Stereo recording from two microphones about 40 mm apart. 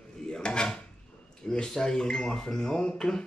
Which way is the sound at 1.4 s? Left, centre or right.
Centre.